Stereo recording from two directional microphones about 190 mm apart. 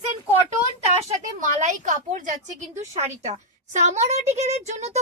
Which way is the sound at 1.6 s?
40° right (ahead or behind).